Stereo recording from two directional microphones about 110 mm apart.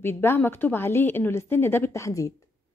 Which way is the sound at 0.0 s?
20° left (ahead or behind).